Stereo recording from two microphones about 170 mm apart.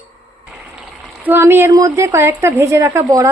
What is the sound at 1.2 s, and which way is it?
A woman's voice, 15° right (ahead or behind).